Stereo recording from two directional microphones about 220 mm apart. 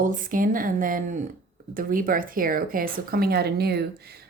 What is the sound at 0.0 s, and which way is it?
A woman's voice, 40° right (ahead or behind).